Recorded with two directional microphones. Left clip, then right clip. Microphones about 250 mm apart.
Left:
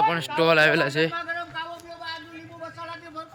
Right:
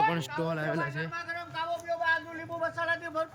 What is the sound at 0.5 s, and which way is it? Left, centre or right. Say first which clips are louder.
Speech: left 16 dB; left.